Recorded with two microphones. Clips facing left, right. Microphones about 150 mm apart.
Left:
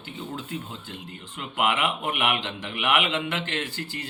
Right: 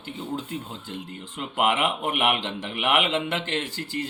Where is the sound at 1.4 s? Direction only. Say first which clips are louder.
Right 2 dB; 35° right (ahead or behind).